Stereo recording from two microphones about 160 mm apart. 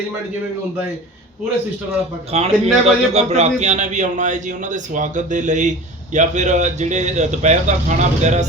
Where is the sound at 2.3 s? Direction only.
40° right (ahead or behind).